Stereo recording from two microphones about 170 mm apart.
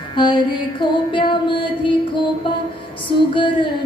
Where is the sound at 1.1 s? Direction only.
30° left (ahead or behind).